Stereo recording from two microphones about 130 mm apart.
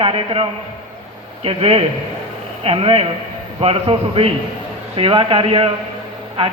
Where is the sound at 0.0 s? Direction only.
45° right (ahead or behind).